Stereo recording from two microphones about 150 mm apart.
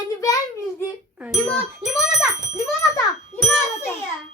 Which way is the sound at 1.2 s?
Centre (ahead or behind).